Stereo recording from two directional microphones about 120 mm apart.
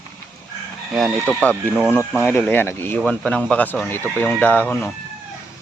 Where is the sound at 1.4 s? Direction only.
15° left (ahead or behind).